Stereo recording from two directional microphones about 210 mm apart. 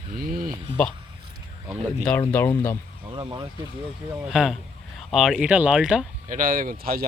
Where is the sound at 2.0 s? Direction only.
5° left (ahead or behind).